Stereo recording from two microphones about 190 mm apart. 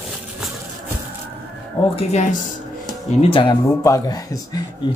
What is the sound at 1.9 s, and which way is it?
Speech, 35° left (ahead or behind).